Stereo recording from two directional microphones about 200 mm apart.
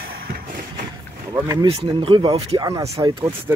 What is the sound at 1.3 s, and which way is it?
Speech, 20° right (ahead or behind).